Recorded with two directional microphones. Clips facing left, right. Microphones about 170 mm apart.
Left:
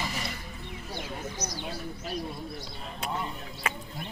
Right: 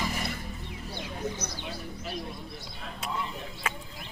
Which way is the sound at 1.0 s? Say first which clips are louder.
Right 2 dB; 25° right (ahead or behind).